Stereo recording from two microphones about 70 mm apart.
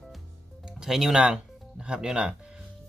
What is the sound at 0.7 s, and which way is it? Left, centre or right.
Speech, centre.